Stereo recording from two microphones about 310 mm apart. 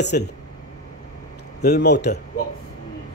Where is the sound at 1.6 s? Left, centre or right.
Left.